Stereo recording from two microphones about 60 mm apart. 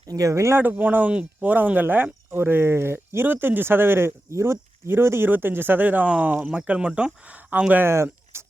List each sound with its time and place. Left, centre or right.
0.1 s speech: right
0.5 s speech: right
6.6 s speech: centre
7.9 s a sound: right